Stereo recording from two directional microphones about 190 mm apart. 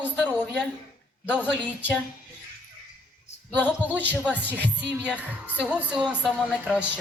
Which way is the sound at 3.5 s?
10° left (ahead or behind).